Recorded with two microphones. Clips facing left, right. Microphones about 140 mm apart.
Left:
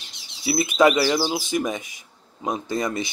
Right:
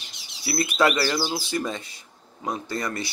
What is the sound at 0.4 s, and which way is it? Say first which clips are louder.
Speech: left 4 dB; 20° left (ahead or behind).